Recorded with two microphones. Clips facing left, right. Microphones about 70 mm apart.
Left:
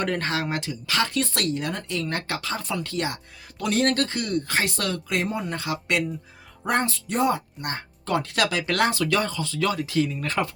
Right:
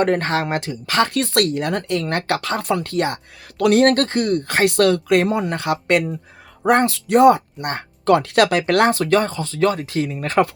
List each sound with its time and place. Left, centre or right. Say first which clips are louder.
0.0 s speech: right 7 dB; right